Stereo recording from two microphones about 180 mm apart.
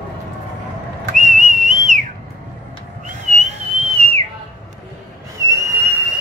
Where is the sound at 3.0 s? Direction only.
40° right (ahead or behind).